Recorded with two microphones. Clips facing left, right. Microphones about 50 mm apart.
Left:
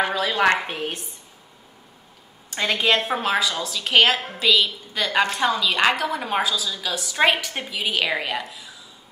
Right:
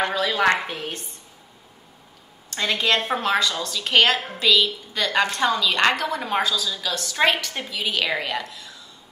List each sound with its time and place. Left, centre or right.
0.0 s a woman's voice: centre
0.7 s a woman's voice: left
2.5 s a woman's voice: centre